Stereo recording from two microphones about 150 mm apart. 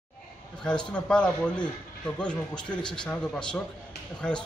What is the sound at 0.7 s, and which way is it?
A man's voice, 5° left (ahead or behind).